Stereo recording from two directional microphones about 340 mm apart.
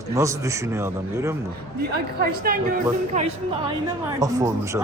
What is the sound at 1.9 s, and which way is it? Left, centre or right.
A woman's voice, right.